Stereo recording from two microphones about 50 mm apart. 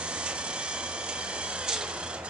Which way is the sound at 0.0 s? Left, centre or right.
Right.